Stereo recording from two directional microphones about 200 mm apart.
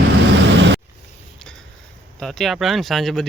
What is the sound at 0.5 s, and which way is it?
Vehicle, 65° right (ahead or behind).